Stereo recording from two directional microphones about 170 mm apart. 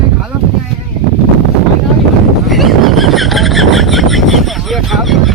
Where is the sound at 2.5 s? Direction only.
Centre (ahead or behind).